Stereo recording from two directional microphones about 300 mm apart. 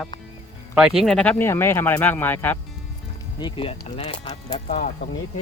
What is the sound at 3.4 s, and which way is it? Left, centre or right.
Speech, centre.